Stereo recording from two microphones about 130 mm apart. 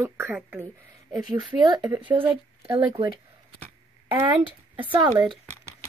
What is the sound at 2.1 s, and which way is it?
Speech, 45° right (ahead or behind).